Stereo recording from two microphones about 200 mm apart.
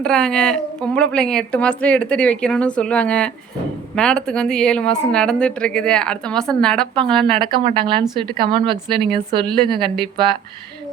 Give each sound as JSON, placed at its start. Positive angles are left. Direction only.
{"t": 0.0, "sound": "a woman's voice", "side_deg": 5}
{"t": 7.3, "sound": "speech", "side_deg": -25}